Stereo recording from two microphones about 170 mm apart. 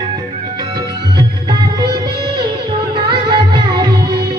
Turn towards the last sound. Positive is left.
turn(degrees=-25)  # may be behind; listen again after turning